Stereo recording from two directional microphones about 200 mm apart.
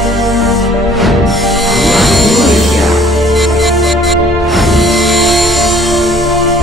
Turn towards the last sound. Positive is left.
turn(degrees=0)  # may be behind; listen again after turning